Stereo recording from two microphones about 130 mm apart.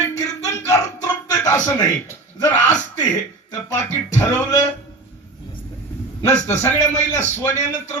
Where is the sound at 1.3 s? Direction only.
25° left (ahead or behind).